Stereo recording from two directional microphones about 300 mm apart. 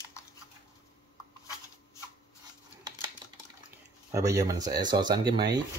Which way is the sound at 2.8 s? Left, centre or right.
Centre.